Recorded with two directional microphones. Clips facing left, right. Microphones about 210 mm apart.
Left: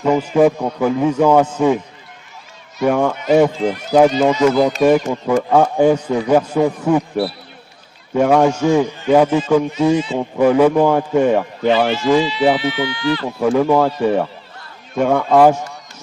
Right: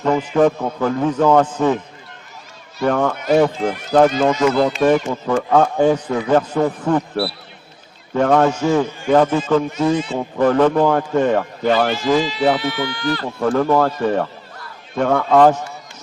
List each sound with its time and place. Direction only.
0.0 s a man's voice: 10° left (ahead or behind)
2.8 s a man's voice: 10° left (ahead or behind)
12.7 s speech: 45° right (ahead or behind)
13.2 s a man's voice: 10° left (ahead or behind)